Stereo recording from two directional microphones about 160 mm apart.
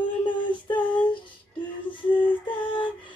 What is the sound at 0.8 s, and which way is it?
Child singing, 10° left (ahead or behind).